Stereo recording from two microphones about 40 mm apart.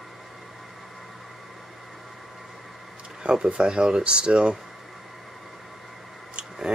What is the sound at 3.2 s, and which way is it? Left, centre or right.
Speech, right.